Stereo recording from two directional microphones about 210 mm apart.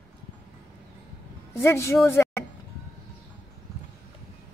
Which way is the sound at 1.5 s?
10° left (ahead or behind).